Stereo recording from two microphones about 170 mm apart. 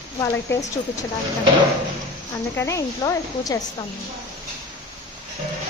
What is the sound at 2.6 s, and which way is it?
A woman's voice, 20° left (ahead or behind).